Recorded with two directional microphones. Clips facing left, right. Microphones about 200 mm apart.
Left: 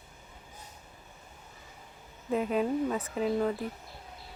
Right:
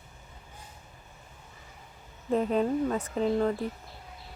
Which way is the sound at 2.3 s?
5° left (ahead or behind).